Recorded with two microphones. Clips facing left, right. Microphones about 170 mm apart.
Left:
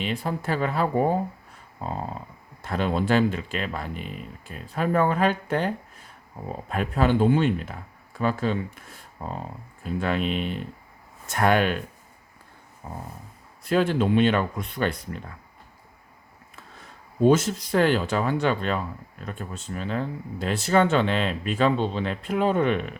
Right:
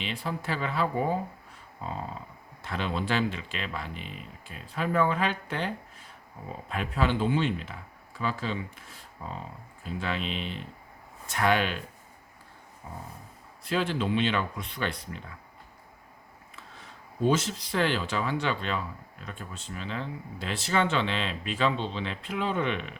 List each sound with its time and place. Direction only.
0.0 s speech: 45° left (ahead or behind)
12.8 s speech: 50° left (ahead or behind)
17.2 s speech: 50° left (ahead or behind)